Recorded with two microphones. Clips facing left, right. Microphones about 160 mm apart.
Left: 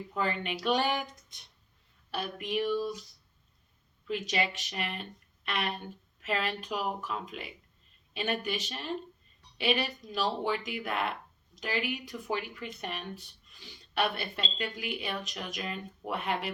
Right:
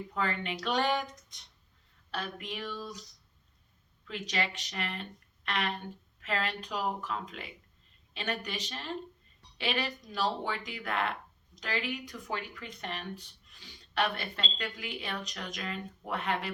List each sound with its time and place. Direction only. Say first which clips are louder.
0.1 s speech: left 2 dB; 15° left (ahead or behind)
2.0 s speech: left 3 dB; 10° left (ahead or behind)
4.0 s speech: left 3 dB; 15° left (ahead or behind)